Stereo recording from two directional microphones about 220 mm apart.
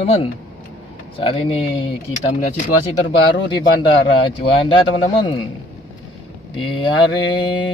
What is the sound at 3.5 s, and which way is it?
Mantra, 20° left (ahead or behind).